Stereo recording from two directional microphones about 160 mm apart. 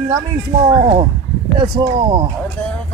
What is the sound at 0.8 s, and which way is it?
Speech, 35° right (ahead or behind).